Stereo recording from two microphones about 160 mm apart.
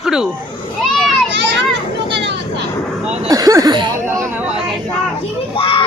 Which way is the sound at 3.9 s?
15° right (ahead or behind).